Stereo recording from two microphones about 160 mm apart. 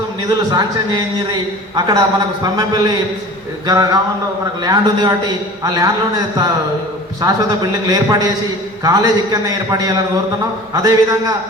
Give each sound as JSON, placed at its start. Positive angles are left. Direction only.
{"t": 1.3, "sound": "a man's voice", "side_deg": -25}